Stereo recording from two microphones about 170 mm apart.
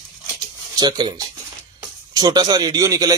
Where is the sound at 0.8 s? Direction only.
25° right (ahead or behind).